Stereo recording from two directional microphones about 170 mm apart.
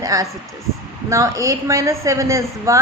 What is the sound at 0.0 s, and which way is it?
A woman's voice, 20° right (ahead or behind).